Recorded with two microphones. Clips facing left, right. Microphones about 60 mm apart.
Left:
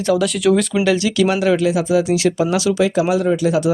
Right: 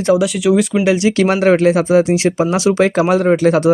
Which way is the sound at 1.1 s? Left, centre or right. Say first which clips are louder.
Right 3 dB; right.